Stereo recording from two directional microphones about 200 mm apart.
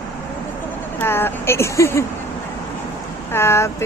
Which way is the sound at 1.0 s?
10° left (ahead or behind).